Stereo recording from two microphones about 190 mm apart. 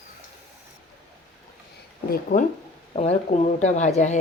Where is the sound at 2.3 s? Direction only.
45° left (ahead or behind).